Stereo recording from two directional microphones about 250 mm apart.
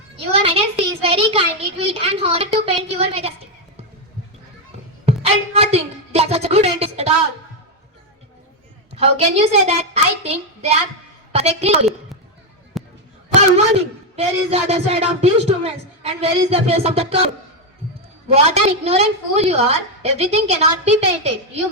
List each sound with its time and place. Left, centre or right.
0.3 s a child's voice: right
5.0 s a woman's voice: right
9.0 s a man's voice: right
12.7 s a sound: centre
13.3 s a man's voice: right
18.4 s a man's voice: right